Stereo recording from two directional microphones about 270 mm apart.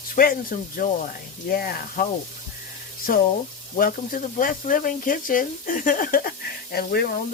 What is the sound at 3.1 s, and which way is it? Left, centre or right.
Speech, left.